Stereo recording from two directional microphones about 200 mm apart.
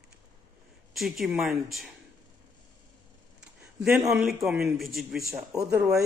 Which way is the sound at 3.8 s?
5° right (ahead or behind).